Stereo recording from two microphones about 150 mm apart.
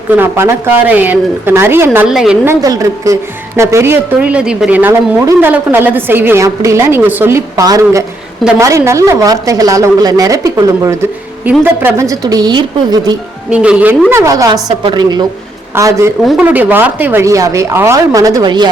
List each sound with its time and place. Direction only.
0.1 s a woman's voice: 15° right (ahead or behind)
2.0 s a woman's voice: 5° right (ahead or behind)
2.5 s a woman's voice: 25° right (ahead or behind)
13.5 s a woman's voice: 10° right (ahead or behind)
14.1 s speech: 20° right (ahead or behind)